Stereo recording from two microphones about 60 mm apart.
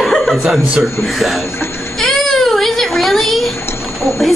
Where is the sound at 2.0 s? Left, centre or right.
Centre.